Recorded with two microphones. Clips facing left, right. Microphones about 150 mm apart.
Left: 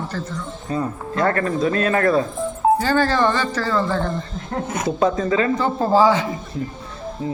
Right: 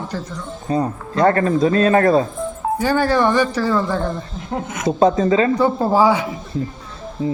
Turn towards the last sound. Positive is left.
turn(degrees=-20)  # may be behind; listen again after turning